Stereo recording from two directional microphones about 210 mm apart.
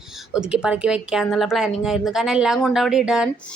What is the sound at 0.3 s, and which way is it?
A woman's voice, 5° right (ahead or behind).